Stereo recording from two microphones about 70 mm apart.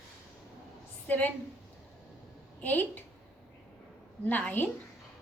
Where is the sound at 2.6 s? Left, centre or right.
Left.